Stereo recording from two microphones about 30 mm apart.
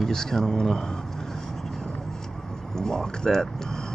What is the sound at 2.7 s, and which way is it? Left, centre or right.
Speech, centre.